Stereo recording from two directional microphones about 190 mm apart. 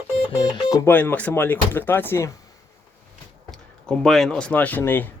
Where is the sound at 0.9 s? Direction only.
10° left (ahead or behind).